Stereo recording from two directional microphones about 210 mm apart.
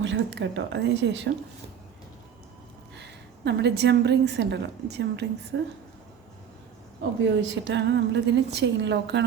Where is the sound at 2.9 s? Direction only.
55° right (ahead or behind).